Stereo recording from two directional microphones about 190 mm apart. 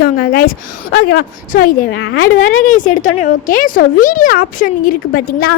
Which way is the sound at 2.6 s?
45° left (ahead or behind).